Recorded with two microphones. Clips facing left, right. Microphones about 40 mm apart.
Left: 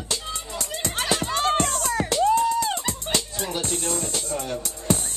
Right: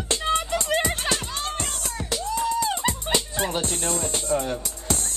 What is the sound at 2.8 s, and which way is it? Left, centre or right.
Music, right.